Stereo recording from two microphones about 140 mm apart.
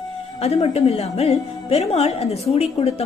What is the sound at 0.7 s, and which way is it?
A woman's voice, 50° left (ahead or behind).